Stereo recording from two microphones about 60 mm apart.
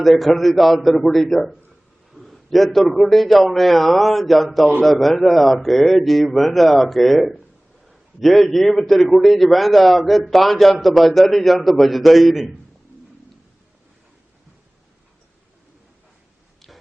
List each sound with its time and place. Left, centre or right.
0.0 s a man's voice: centre